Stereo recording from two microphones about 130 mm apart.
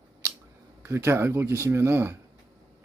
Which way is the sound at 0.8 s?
20° right (ahead or behind).